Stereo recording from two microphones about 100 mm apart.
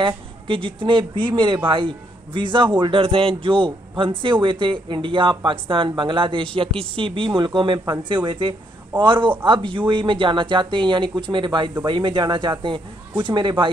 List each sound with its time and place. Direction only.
0.0 s speech: 55° right (ahead or behind)